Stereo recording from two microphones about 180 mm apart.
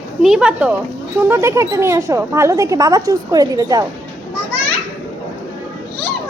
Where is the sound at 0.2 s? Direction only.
5° right (ahead or behind); by 3.8 s 20° right (ahead or behind).